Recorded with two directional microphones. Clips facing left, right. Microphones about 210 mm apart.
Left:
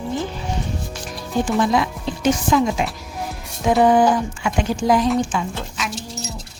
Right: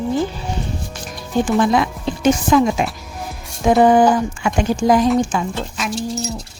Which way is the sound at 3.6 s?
45° right (ahead or behind).